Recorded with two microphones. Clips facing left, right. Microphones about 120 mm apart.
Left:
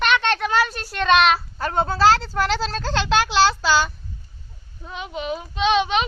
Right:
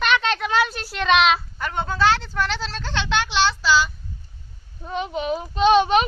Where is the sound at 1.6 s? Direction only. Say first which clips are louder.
Left 5 dB; 35° left (ahead or behind).